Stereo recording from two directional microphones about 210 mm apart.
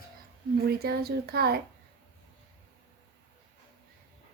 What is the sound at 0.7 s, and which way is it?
Speech, 50° right (ahead or behind).